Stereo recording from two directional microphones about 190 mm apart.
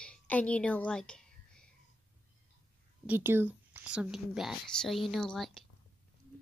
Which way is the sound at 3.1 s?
10° right (ahead or behind).